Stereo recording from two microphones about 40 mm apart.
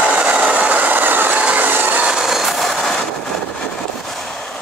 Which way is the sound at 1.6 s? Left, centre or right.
Right.